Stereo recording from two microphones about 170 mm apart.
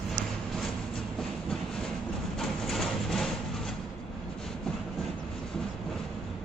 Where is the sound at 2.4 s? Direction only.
Centre (ahead or behind).